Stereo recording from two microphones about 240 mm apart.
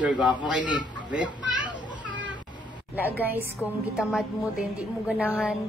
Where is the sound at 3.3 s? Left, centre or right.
Centre.